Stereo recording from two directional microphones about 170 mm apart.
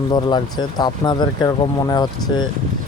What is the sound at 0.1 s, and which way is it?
Speech, 25° left (ahead or behind).